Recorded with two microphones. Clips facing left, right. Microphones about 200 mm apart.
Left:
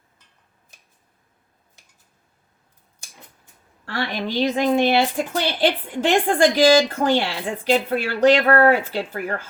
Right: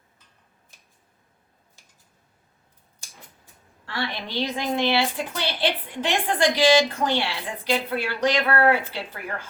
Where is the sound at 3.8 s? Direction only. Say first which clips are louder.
Left 5 dB; 50° left (ahead or behind).